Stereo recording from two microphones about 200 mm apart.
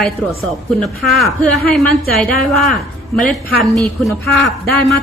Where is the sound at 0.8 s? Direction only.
Centre (ahead or behind).